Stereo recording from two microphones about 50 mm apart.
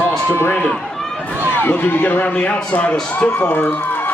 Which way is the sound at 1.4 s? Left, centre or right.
Left.